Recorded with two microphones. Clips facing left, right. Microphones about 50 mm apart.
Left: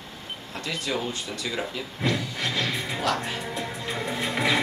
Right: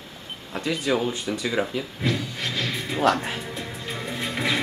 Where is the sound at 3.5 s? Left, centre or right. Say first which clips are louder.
Left 2 dB; centre.